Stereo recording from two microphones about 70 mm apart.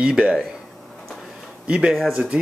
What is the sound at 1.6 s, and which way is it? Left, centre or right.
Speech, centre.